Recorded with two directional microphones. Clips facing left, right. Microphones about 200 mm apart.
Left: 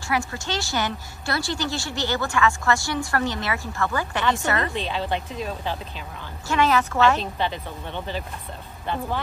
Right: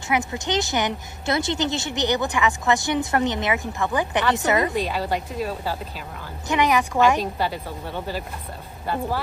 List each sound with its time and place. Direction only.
0.1 s a woman's voice: 20° right (ahead or behind)